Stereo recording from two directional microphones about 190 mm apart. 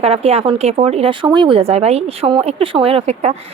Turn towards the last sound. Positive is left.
turn(degrees=-35)  # may be behind; listen again after turning